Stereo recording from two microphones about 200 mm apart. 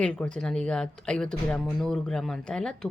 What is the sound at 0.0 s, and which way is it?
Speech, 5° left (ahead or behind).